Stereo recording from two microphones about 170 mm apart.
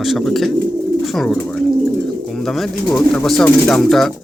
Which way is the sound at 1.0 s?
Centre (ahead or behind).